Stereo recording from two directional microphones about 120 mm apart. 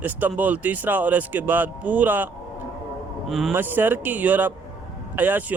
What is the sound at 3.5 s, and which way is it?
Speech, 15° right (ahead or behind).